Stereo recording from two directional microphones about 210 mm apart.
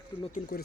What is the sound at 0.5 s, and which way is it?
Speech, 50° left (ahead or behind).